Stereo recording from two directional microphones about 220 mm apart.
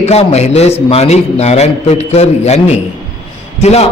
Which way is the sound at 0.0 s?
30° left (ahead or behind).